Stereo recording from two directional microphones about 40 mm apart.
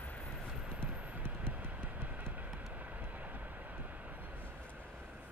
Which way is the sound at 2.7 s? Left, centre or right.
Right.